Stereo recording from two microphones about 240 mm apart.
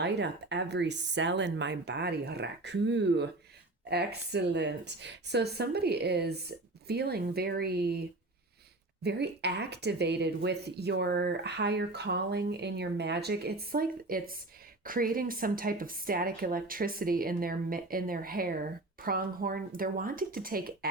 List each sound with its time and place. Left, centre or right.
0.0 s speech: right
9.0 s speech: right